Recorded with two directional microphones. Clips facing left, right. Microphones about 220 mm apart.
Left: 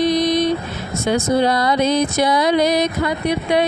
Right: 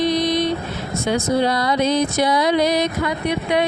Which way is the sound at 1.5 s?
50° left (ahead or behind).